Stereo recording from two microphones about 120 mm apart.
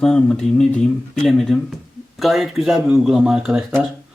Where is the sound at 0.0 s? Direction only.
5° left (ahead or behind).